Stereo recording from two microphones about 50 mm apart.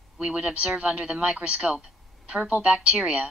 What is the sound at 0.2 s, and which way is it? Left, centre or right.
A woman's voice, centre.